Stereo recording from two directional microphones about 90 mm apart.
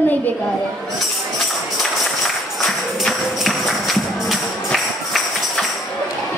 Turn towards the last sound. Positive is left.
turn(degrees=0)  # may be behind; listen again after turning